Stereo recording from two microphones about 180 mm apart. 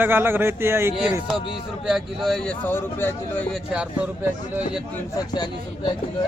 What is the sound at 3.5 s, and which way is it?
Speech, 5° right (ahead or behind).